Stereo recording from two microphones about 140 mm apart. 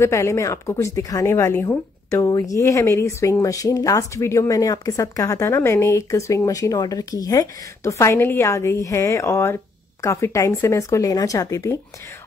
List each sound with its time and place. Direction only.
0.0 s speech: 20° left (ahead or behind)